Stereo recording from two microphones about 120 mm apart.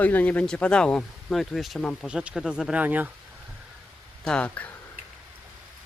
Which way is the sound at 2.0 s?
5° right (ahead or behind).